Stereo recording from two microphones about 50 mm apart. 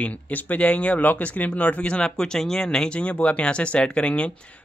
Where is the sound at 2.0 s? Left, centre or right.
Centre.